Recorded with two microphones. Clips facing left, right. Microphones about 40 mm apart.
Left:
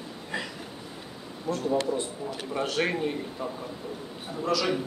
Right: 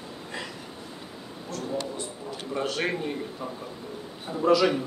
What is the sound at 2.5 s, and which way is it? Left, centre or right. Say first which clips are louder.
Speech: even; centre.